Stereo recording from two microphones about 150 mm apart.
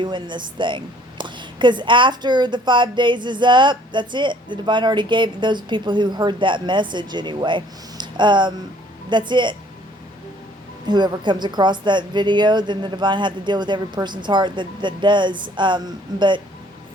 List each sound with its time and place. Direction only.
0.0 s a woman's voice: 30° right (ahead or behind)
10.8 s a woman's voice: 30° right (ahead or behind)